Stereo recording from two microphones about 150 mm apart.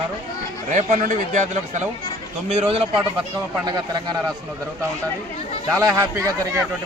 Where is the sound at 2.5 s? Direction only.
45° right (ahead or behind); by 4.2 s 25° right (ahead or behind).